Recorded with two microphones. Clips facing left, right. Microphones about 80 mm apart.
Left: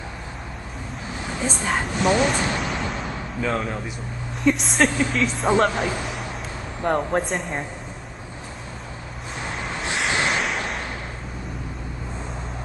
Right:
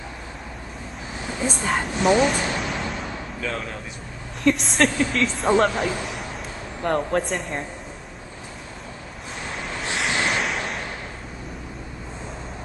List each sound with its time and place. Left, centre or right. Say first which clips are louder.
1.4 s speech: right 1 dB; centre
3.3 s a man's voice: left 6 dB; left
4.4 s speech: even; centre
9.9 s a sound: left 1 dB; centre